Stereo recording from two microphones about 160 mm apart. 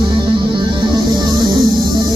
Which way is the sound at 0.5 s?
30° right (ahead or behind).